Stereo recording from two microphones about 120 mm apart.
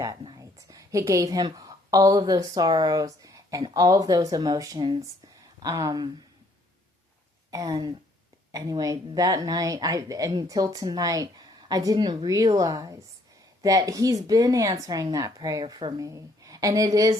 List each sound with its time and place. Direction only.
0.0 s a woman's voice: 30° right (ahead or behind)
7.5 s a woman's voice: 35° right (ahead or behind)
15.6 s a woman's voice: 40° right (ahead or behind)